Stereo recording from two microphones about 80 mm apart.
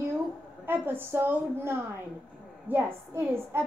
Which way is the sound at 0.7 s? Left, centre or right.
Right.